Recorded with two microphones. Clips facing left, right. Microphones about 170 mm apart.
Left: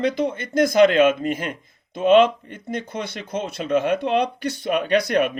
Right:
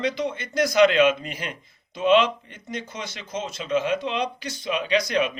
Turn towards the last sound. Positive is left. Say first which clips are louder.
# left 4 dB
turn(degrees=60)  # may be behind; listen again after turning